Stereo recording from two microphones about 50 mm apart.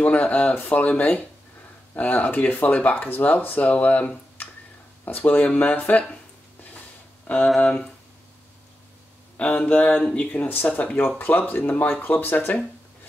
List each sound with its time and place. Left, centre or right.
0.0 s speech: left
7.2 s speech: left
9.4 s speech: left